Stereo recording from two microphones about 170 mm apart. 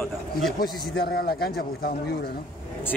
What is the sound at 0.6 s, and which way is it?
A man's voice, 65° left (ahead or behind).